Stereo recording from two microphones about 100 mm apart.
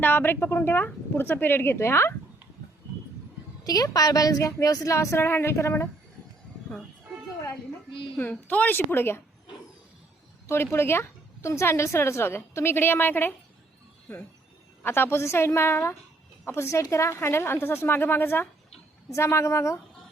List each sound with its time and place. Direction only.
0.0 s speech: 20° left (ahead or behind)
3.6 s a woman's voice: 40° left (ahead or behind)
8.1 s speech: 15° left (ahead or behind)
10.4 s speech: 25° left (ahead or behind)